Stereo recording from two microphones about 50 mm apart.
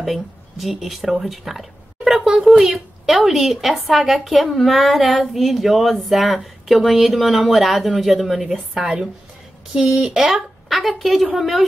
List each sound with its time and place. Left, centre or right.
0.0 s speech: centre
2.1 s a woman's voice: centre
9.8 s a woman's voice: centre